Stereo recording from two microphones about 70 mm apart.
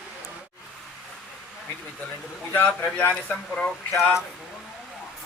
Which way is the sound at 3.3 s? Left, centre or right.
Centre.